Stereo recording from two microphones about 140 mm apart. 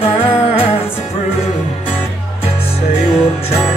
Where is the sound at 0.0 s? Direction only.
40° left (ahead or behind).